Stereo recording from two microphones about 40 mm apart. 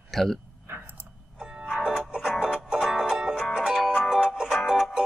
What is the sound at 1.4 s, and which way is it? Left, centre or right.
Music, right.